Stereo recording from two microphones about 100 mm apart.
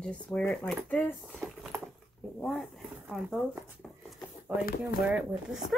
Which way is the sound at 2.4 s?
Centre (ahead or behind).